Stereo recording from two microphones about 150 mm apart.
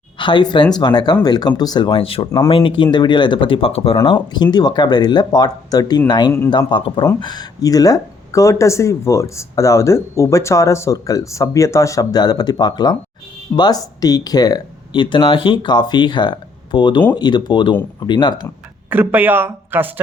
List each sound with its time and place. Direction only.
0.2 s speech: 30° left (ahead or behind)
18.9 s speech: 15° right (ahead or behind)